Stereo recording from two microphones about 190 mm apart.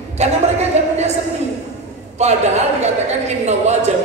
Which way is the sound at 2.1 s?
35° right (ahead or behind).